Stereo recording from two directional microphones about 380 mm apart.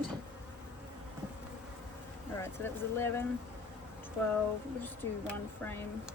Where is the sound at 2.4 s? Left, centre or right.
Centre.